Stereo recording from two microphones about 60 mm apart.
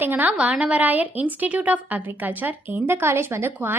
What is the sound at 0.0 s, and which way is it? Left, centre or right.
Speech, right.